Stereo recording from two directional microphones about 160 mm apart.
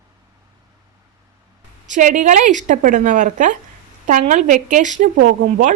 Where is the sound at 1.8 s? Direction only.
50° right (ahead or behind).